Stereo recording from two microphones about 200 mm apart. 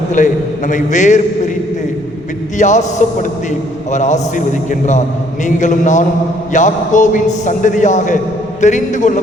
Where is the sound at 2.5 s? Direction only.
35° left (ahead or behind).